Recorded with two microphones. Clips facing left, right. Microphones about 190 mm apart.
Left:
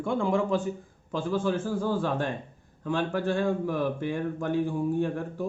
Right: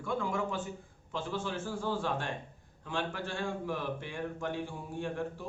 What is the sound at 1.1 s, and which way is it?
A man's voice, 45° left (ahead or behind).